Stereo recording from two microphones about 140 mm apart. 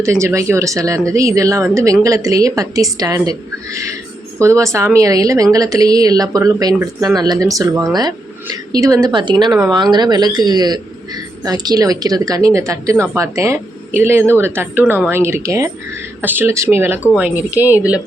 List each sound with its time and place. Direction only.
0.0 s a woman's voice: 20° right (ahead or behind)